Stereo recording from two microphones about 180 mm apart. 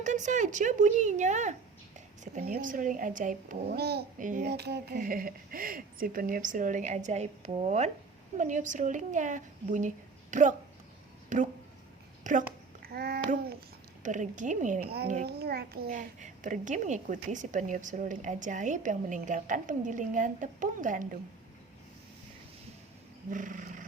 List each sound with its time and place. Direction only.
0.0 s a child's voice: 45° right (ahead or behind)
4.4 s a child's voice: 65° right (ahead or behind); by 12.5 s 45° right (ahead or behind)
12.8 s babbling: 60° right (ahead or behind)
14.0 s a child's voice: 45° right (ahead or behind)
14.8 s a child's voice: 60° right (ahead or behind)
23.3 s roaring cats: 45° right (ahead or behind)